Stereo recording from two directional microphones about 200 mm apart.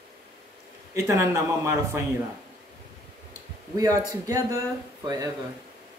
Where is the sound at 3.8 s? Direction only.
15° right (ahead or behind).